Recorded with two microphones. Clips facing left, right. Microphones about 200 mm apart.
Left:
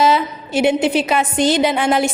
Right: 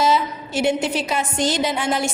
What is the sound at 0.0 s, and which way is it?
A woman's voice, 60° left (ahead or behind).